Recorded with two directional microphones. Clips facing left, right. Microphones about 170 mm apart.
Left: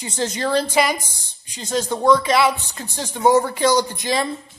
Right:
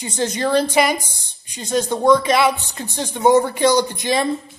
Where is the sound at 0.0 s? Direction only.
20° right (ahead or behind).